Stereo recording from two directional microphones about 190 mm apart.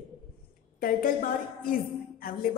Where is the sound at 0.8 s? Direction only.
45° left (ahead or behind).